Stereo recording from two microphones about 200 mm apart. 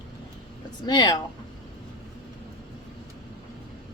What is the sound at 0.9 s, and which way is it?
Speech, 20° left (ahead or behind).